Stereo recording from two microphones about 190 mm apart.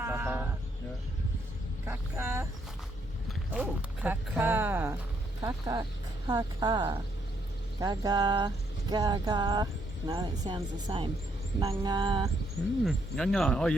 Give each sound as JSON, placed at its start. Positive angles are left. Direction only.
{"t": 0.0, "sound": "sheep", "side_deg": -10}
{"t": 1.9, "sound": "speech", "side_deg": -15}
{"t": 3.6, "sound": "speech", "side_deg": -10}
{"t": 12.8, "sound": "speech", "side_deg": 0}